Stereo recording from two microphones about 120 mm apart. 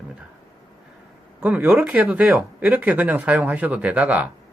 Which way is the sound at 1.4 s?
15° right (ahead or behind).